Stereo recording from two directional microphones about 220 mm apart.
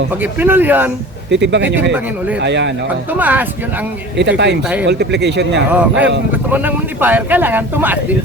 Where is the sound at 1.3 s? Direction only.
55° right (ahead or behind).